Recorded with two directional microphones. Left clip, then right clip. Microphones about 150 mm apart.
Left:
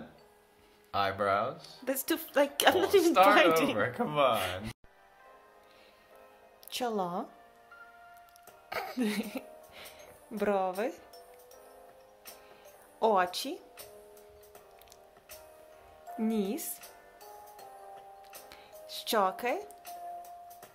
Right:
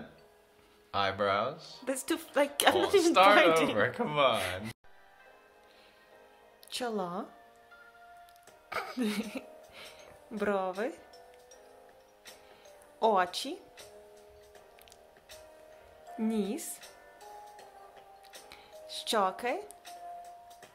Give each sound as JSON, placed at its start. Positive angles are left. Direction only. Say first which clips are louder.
{"t": 0.9, "sound": "a woman's voice", "louder": "even", "side_deg": -5}
{"t": 3.1, "sound": "speech", "louder": "right 1 dB", "side_deg": -20}
{"t": 6.7, "sound": "a woman's voice", "louder": "left 2 dB", "side_deg": 10}
{"t": 8.6, "sound": "music", "louder": "even", "side_deg": 10}
{"t": 13.0, "sound": "a woman's voice", "louder": "even", "side_deg": 10}
{"t": 16.2, "sound": "a woman's voice", "louder": "left 1 dB", "side_deg": 10}
{"t": 18.5, "sound": "music", "louder": "right 2 dB", "side_deg": 10}